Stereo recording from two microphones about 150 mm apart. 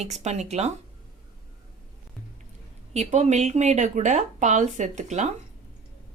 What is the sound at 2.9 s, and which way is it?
Speech, 45° right (ahead or behind).